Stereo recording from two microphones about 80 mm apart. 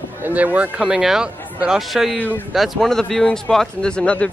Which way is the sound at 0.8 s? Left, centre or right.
Centre.